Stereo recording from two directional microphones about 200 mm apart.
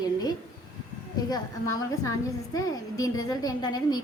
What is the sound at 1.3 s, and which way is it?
A woman's voice, 15° left (ahead or behind).